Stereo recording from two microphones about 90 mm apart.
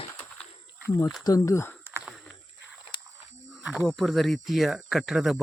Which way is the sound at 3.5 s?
5° right (ahead or behind).